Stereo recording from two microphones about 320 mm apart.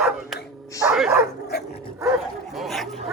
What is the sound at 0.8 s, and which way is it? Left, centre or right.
Bow-wow, centre.